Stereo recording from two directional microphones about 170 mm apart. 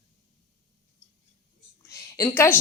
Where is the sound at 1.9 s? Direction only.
15° left (ahead or behind).